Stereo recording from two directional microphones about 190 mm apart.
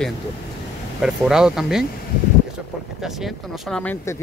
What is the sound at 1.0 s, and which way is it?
Speech, 5° right (ahead or behind).